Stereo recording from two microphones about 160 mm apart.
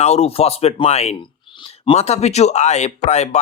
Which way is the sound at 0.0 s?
40° left (ahead or behind).